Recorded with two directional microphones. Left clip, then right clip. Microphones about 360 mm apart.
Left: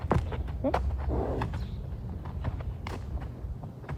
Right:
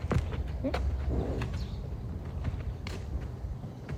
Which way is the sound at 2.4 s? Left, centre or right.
Centre.